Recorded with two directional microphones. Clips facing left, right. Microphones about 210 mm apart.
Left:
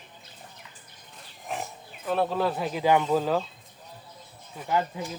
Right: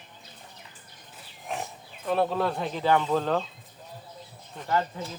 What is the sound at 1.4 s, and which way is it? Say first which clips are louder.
Speech: even; centre (ahead or behind).